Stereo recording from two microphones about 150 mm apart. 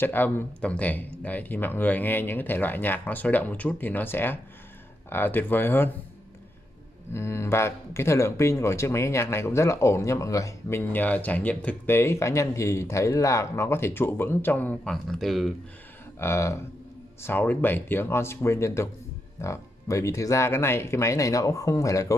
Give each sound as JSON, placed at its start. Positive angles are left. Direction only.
{"t": 0.0, "sound": "speech", "side_deg": 15}
{"t": 7.1, "sound": "speech", "side_deg": 15}
{"t": 16.2, "sound": "speech", "side_deg": 15}